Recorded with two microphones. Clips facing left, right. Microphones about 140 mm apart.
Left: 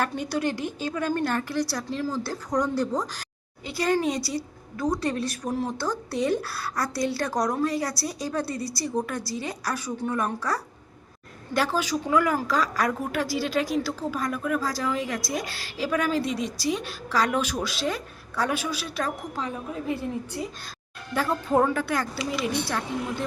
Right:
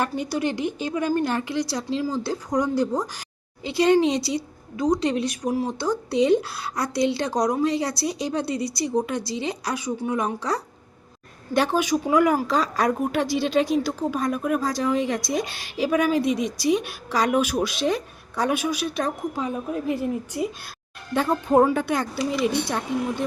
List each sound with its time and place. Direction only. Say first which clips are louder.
0.0 s a woman's voice: right 2 dB; 10° right (ahead or behind)
3.6 s a woman's voice: right 6 dB; 25° right (ahead or behind)